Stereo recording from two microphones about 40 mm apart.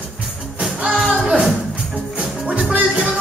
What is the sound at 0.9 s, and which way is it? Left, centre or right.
Music, centre.